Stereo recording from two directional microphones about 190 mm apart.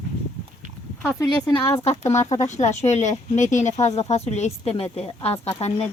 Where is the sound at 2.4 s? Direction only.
40° left (ahead or behind).